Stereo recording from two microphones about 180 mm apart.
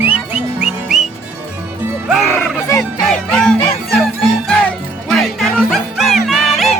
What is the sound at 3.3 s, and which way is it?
Music, 5° left (ahead or behind).